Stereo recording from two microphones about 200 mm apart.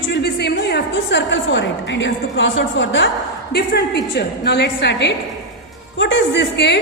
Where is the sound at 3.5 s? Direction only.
55° left (ahead or behind).